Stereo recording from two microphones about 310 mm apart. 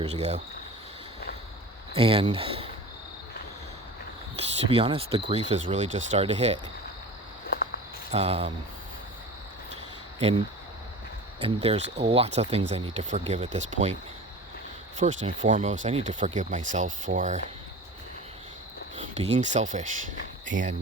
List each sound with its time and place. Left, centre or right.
0.0 s speech: right
1.9 s speech: centre
4.7 s speech: centre
8.1 s speech: centre
10.2 s cricket: centre
11.4 s speech: centre
14.9 s speech: right
18.9 s speech: right